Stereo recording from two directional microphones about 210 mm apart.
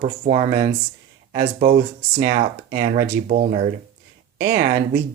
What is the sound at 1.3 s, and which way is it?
Speech, 35° right (ahead or behind).